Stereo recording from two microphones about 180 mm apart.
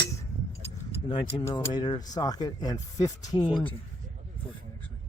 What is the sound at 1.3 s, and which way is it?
Speech, 15° left (ahead or behind).